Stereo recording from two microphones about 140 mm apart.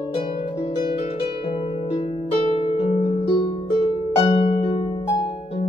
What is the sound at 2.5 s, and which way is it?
Harp, 45° left (ahead or behind).